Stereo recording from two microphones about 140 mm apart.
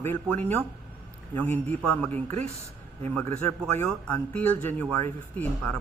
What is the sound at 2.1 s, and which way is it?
Speech, 55° right (ahead or behind).